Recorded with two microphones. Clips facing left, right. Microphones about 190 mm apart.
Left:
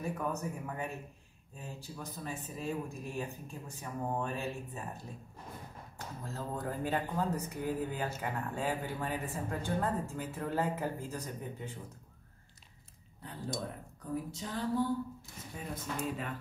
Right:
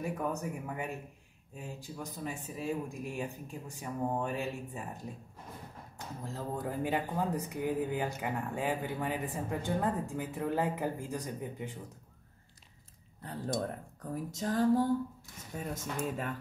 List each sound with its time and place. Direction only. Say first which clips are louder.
0.0 s speech: right 1 dB; 15° right (ahead or behind)
5.9 s speech: right 1 dB; 15° right (ahead or behind)
14.3 s speech: right 10 dB; 45° right (ahead or behind)